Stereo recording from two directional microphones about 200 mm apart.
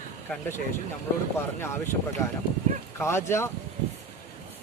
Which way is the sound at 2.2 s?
15° left (ahead or behind).